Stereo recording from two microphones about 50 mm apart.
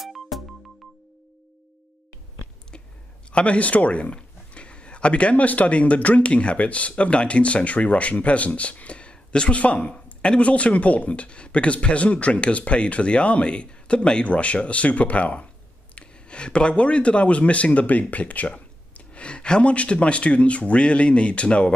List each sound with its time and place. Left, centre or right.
0.0 s music: centre
3.3 s speech: left